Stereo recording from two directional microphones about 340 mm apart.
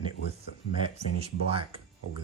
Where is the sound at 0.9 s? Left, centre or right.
Centre.